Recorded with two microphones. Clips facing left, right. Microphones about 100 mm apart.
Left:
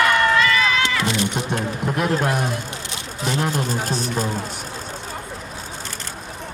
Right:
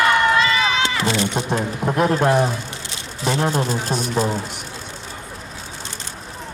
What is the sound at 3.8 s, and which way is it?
Speech, 45° left (ahead or behind).